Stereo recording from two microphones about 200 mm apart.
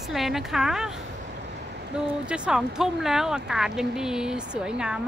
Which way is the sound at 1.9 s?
5° right (ahead or behind).